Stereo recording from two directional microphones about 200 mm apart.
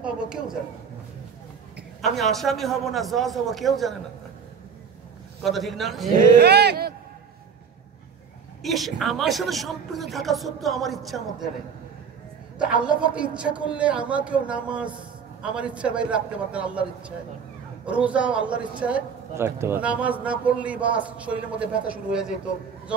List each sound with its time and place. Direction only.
0.0 s a sound: 5° right (ahead or behind)
2.0 s speech: centre (ahead or behind)
5.4 s speech: centre (ahead or behind)
6.1 s speech: 55° right (ahead or behind)
8.6 s speech: centre (ahead or behind)
12.8 s speech: 5° right (ahead or behind)
17.8 s a man's voice: 5° right (ahead or behind)